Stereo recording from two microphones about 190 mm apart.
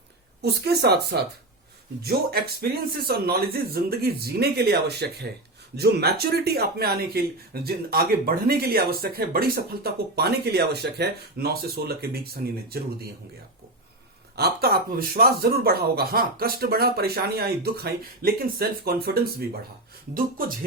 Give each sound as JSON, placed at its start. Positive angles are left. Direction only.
{"t": 0.4, "sound": "speech", "side_deg": -55}
{"t": 14.3, "sound": "speech", "side_deg": -55}